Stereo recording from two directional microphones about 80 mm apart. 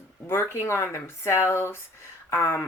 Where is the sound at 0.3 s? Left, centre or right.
Left.